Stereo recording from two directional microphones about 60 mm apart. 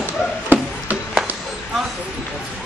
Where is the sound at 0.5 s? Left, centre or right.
Right.